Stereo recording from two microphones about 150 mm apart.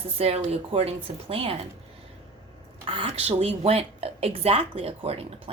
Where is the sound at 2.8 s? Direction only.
40° right (ahead or behind).